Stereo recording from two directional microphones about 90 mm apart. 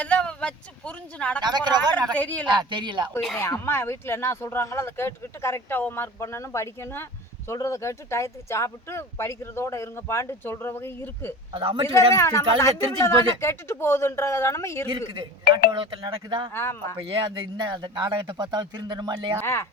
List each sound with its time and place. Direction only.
0.0 s speech: 15° left (ahead or behind)
1.4 s speech: 55° right (ahead or behind)
2.1 s speech: 15° left (ahead or behind)
2.6 s speech: 60° right (ahead or behind)
3.7 s speech: 25° left (ahead or behind)
11.5 s a man's voice: 80° right
12.1 s speech: 30° left (ahead or behind)
14.8 s speech: 70° right (ahead or behind)
16.6 s speech: 25° left (ahead or behind)
17.6 s speech: 55° right (ahead or behind)
19.4 s speech: 25° left (ahead or behind)